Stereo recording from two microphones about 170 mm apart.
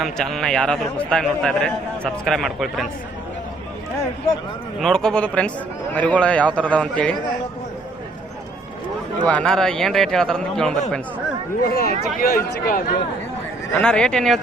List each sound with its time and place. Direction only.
0.0 s speech: centre (ahead or behind)
4.8 s a man's voice: 5° left (ahead or behind)
9.2 s speech: 5° left (ahead or behind)
11.6 s a man's voice: 65° left (ahead or behind)
13.7 s speech: 5° left (ahead or behind)